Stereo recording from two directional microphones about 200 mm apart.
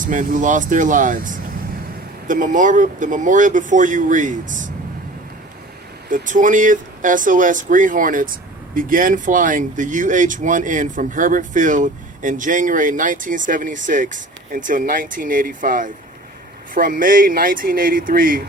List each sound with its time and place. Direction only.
0.0 s speech: 40° right (ahead or behind)
6.1 s speech: 40° right (ahead or behind)